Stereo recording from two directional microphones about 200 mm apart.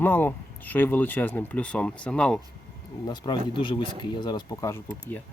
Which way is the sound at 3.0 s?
20° left (ahead or behind).